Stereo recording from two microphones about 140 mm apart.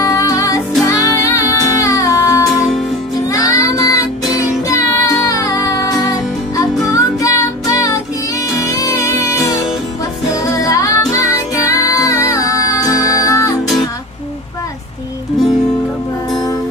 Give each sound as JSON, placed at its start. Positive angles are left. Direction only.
{"t": 0.0, "sound": "music", "side_deg": 25}